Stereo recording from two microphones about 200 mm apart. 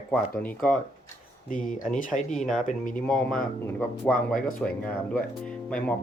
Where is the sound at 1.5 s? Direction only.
40° left (ahead or behind).